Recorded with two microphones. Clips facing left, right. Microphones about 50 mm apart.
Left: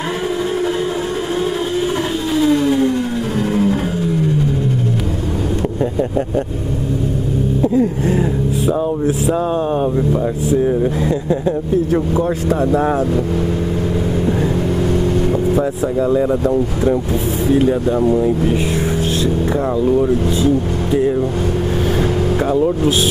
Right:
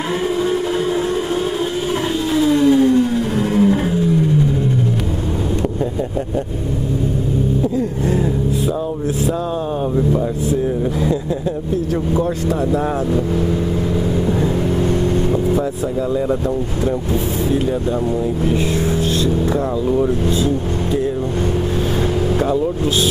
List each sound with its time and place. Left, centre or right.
2.7 s vehicle: left
3.3 s music: right
7.7 s vehicle: left
10.6 s a sound: centre
12.4 s speech: left
17.5 s speech: left
20.1 s speech: left
22.4 s speech: centre